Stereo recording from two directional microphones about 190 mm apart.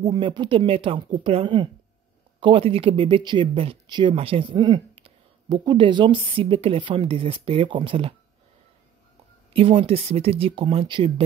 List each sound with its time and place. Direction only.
0.0 s speech: 20° right (ahead or behind)
9.5 s speech: 30° right (ahead or behind)